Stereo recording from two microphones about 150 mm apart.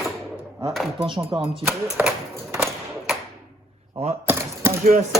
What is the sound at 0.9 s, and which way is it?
Speech, 35° right (ahead or behind).